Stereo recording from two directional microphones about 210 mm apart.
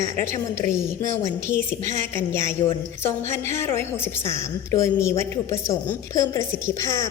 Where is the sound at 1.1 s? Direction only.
15° left (ahead or behind).